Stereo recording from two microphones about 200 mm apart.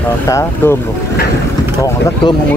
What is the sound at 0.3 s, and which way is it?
Speech, 15° left (ahead or behind).